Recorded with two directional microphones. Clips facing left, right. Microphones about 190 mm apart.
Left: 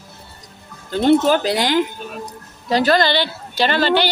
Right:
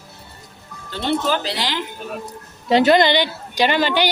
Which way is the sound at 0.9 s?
45° left (ahead or behind).